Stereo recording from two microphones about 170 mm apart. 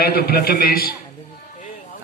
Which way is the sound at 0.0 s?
65° left (ahead or behind).